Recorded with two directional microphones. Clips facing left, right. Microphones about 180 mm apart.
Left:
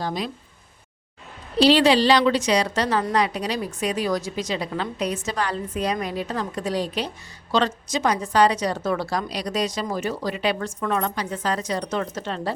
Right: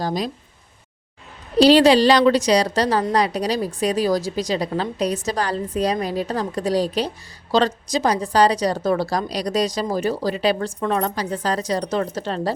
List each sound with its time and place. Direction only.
0.0 s a woman's voice: 40° right (ahead or behind)
1.5 s a woman's voice: 40° right (ahead or behind)